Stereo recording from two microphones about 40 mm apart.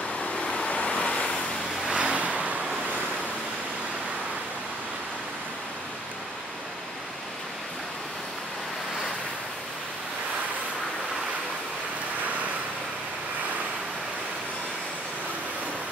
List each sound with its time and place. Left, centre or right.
0.2 s vehicle: left
2.0 s vehicle: right